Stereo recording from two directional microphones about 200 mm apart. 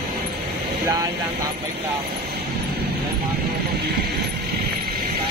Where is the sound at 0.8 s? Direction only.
20° right (ahead or behind).